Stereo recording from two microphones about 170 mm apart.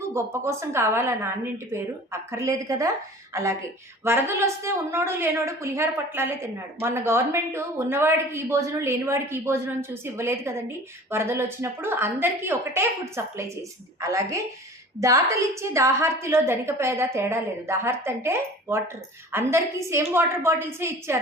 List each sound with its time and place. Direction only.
0.1 s a woman's voice: 15° right (ahead or behind)